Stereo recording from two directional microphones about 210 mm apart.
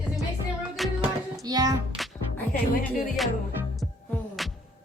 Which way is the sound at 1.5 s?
20° right (ahead or behind).